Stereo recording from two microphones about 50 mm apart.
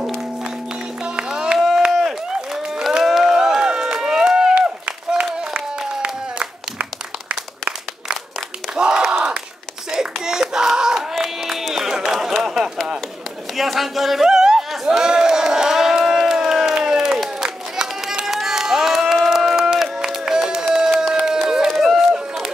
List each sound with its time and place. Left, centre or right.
1.3 s music: centre
1.9 s crowd: centre
3.3 s crowd: centre
4.6 s a sound: right
8.7 s battle cry: centre
9.8 s hands: centre
11.0 s a sound: centre
14.9 s crowd: centre
19.1 s run: centre